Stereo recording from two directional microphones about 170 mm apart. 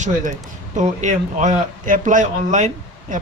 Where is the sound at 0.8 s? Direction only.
45° right (ahead or behind).